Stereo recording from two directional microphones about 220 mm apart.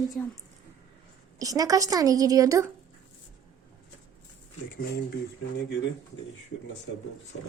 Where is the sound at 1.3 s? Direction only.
15° right (ahead or behind).